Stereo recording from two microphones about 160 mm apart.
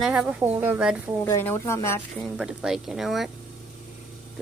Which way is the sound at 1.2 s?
15° left (ahead or behind).